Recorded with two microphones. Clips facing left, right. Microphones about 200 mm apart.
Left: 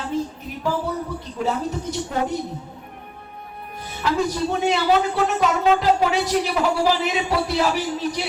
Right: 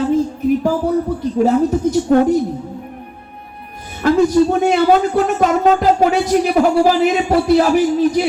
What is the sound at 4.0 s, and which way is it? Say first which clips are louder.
Speech: right 10 dB; 50° right (ahead or behind).